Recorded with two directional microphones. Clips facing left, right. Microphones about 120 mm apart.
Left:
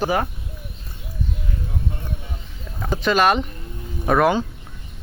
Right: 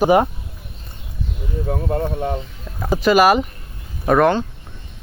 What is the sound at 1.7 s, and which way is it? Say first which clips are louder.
Speech: right 15 dB; 65° right (ahead or behind).